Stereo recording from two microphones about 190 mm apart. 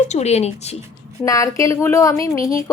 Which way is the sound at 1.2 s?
15° left (ahead or behind).